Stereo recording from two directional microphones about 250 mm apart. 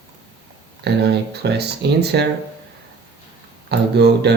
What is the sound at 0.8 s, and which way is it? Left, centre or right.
Speech, right.